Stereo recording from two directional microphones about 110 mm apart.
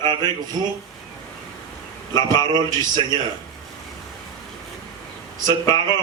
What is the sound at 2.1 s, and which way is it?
Speech, 40° right (ahead or behind).